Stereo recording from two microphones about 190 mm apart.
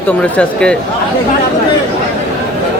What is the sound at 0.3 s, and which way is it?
Speech, 5° left (ahead or behind).